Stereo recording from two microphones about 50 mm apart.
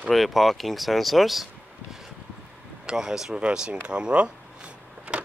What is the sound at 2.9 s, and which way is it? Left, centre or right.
Speech, centre.